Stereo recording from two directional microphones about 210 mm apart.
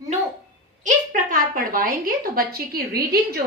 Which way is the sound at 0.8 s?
40° right (ahead or behind).